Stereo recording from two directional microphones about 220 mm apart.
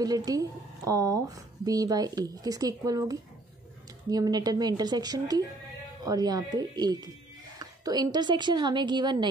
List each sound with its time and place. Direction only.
0.0 s a woman's voice: 15° right (ahead or behind)